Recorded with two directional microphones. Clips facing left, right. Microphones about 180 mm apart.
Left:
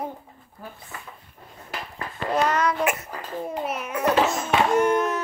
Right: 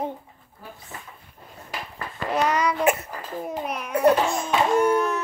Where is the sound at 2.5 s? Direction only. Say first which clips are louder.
Even; 10° right (ahead or behind).